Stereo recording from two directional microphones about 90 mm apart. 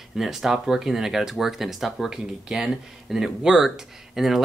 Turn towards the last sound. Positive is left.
turn(degrees=-5)  # may be behind; listen again after turning